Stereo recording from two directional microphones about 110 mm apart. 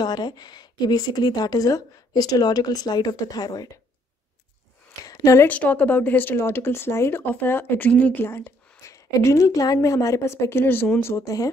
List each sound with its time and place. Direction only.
0.0 s speech: 40° left (ahead or behind)
5.0 s speech: 30° left (ahead or behind)
5.5 s speech: 15° left (ahead or behind); by 11.5 s 30° left (ahead or behind)